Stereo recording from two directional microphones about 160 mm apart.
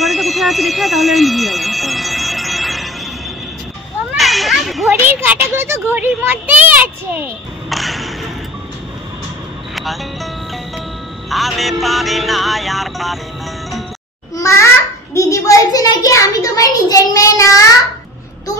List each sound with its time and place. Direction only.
0.0 s alarm: centre (ahead or behind)
4.1 s children playing: centre (ahead or behind)
4.9 s a child's voice: 10° right (ahead or behind)
7.7 s a sound: centre (ahead or behind)
9.8 s speech: centre (ahead or behind)
11.2 s music: centre (ahead or behind)
14.3 s a child's voice: 20° left (ahead or behind)